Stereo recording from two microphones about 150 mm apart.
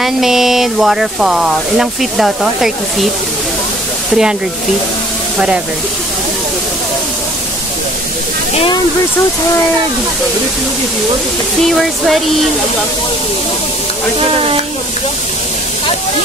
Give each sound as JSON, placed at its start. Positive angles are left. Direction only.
{"t": 0.0, "sound": "speech", "side_deg": 0}
{"t": 4.1, "sound": "speech", "side_deg": -5}
{"t": 11.6, "sound": "speech", "side_deg": 0}